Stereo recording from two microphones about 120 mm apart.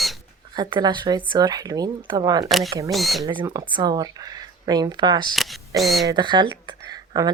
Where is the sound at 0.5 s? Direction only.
35° right (ahead or behind).